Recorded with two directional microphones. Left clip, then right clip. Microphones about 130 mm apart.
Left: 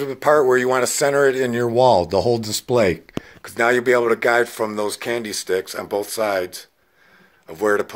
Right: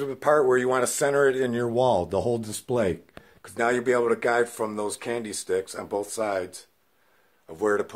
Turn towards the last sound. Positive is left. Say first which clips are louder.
# left 5 dB
turn(degrees=10)  # may be behind; listen again after turning